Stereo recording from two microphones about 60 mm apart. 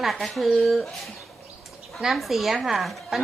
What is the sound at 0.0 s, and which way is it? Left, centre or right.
Speech, centre.